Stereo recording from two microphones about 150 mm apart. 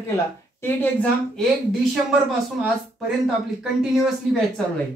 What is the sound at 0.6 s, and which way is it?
Speech, 10° left (ahead or behind).